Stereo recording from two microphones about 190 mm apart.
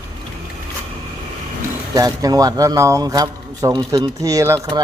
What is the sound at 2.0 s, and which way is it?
Speech, 20° right (ahead or behind).